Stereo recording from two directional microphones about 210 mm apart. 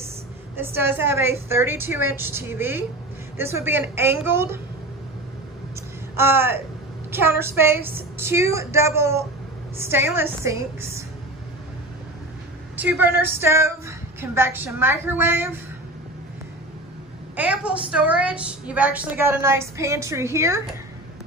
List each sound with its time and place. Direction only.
0.6 s a woman's voice: 10° right (ahead or behind)
6.1 s a woman's voice: 10° right (ahead or behind)
12.7 s a woman's voice: 10° right (ahead or behind)
17.4 s a woman's voice: 5° right (ahead or behind)